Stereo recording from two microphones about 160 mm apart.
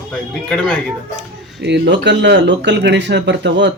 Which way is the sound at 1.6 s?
90° right.